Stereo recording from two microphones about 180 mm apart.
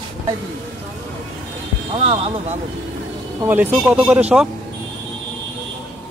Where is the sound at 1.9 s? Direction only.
30° right (ahead or behind).